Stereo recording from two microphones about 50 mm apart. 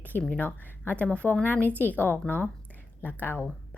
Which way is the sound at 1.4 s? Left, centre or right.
Left.